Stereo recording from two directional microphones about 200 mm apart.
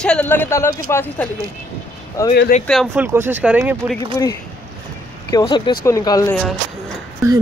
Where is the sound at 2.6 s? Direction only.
Centre (ahead or behind).